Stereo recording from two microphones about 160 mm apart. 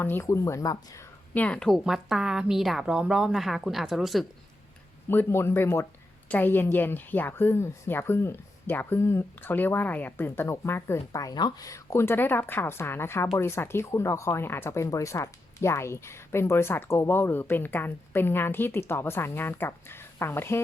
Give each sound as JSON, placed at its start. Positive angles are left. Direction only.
{"t": 0.0, "sound": "speech", "side_deg": 15}
{"t": 1.3, "sound": "a woman's voice", "side_deg": 10}
{"t": 5.0, "sound": "speech", "side_deg": 15}